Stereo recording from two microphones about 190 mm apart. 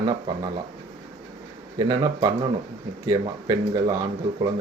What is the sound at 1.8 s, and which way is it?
Speech, 20° right (ahead or behind).